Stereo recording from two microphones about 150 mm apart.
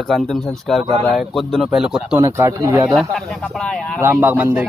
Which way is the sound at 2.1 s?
15° right (ahead or behind).